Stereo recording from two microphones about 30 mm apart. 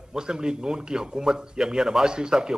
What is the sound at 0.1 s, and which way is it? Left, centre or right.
Speech, right.